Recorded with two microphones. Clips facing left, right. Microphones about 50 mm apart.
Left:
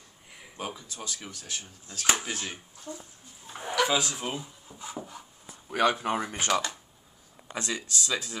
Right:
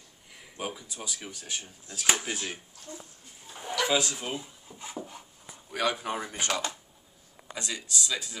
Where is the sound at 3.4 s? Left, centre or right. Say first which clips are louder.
Left 4 dB; left.